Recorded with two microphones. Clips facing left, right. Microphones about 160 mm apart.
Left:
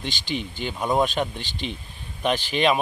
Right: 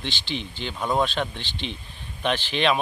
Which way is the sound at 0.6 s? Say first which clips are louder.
Left 2 dB; 10° left (ahead or behind).